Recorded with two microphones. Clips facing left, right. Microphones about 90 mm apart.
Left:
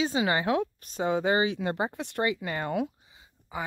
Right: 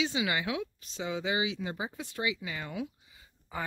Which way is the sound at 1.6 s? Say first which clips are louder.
Left 7 dB; 65° left (ahead or behind).